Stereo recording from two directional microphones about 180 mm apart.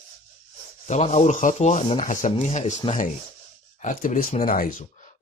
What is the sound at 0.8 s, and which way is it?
Speech, 40° left (ahead or behind).